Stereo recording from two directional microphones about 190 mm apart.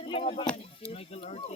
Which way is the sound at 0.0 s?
30° left (ahead or behind).